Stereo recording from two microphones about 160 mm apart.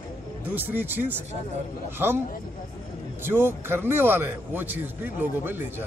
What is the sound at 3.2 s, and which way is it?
A man's voice, 15° right (ahead or behind).